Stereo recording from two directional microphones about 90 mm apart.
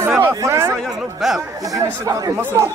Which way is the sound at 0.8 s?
Centre (ahead or behind).